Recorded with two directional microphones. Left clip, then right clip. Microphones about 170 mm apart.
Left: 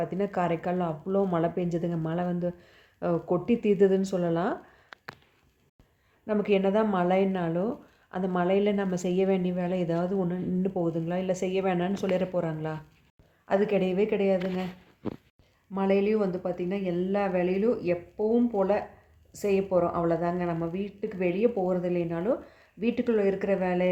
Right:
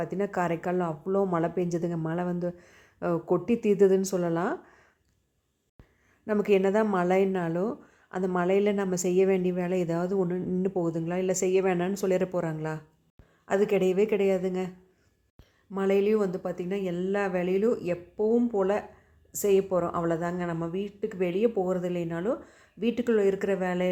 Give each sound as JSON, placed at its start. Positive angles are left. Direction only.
{"t": 0.0, "sound": "a woman's voice", "side_deg": -20}
{"t": 6.2, "sound": "a woman's voice", "side_deg": -30}
{"t": 15.7, "sound": "a woman's voice", "side_deg": -30}